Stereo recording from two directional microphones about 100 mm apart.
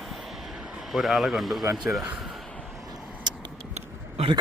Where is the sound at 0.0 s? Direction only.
Centre (ahead or behind).